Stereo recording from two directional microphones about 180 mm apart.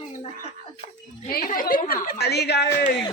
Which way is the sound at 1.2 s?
55° left (ahead or behind).